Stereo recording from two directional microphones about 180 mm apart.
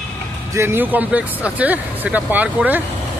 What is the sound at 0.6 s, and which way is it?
Speech, 10° right (ahead or behind).